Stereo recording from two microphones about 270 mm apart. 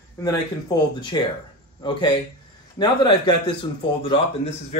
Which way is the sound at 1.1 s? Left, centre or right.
Centre.